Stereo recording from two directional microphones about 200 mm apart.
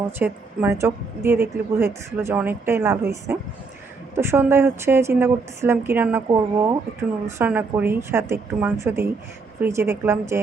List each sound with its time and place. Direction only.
0.2 s a woman's voice: 10° right (ahead or behind)